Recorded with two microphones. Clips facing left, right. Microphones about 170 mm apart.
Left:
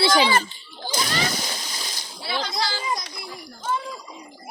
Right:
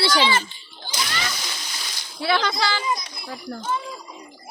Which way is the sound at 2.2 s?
70° right (ahead or behind).